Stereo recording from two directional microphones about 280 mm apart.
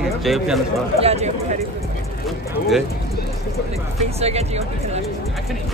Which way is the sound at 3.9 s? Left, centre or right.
Right.